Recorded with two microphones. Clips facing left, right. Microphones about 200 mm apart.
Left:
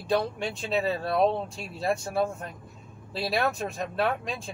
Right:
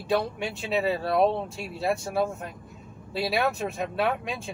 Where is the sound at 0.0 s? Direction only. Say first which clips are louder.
Even; 5° right (ahead or behind).